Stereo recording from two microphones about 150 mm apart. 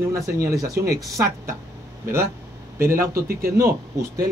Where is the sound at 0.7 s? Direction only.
90° right.